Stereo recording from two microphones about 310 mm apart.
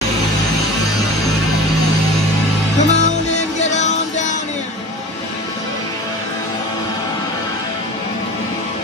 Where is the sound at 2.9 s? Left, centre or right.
Left.